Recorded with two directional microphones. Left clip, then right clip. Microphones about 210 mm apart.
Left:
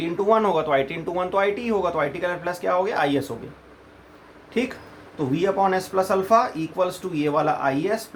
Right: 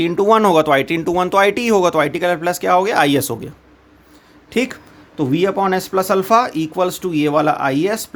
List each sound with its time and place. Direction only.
0.0 s speech: 40° right (ahead or behind)
4.5 s speech: 40° right (ahead or behind)